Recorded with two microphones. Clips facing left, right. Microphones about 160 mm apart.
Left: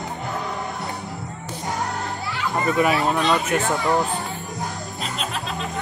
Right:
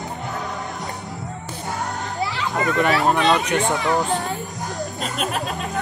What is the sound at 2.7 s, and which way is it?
Speech, 5° left (ahead or behind).